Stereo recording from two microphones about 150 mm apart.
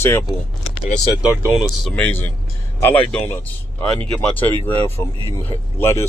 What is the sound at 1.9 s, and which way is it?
Speech, 10° left (ahead or behind).